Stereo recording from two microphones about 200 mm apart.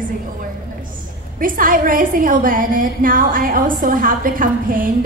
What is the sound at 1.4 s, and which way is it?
A woman's voice, 45° right (ahead or behind).